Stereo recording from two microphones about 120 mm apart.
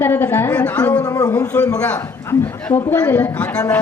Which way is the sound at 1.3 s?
10° left (ahead or behind).